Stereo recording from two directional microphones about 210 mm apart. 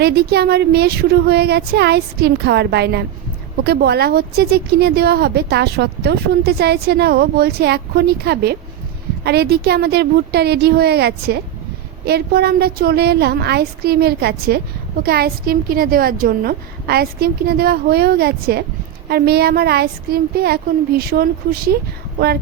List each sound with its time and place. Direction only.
0.0 s a woman's voice: 50° right (ahead or behind)